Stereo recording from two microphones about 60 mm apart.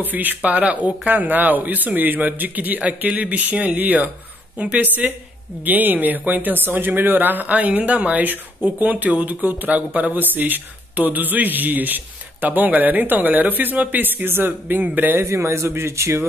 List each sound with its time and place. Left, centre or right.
0.0 s speech: right
15.2 s a man's voice: right